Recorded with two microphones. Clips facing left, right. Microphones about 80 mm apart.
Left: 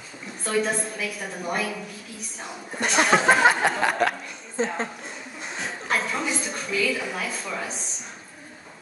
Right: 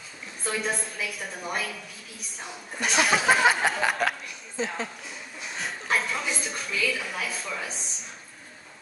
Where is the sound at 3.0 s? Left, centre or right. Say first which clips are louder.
Left 4 dB; left.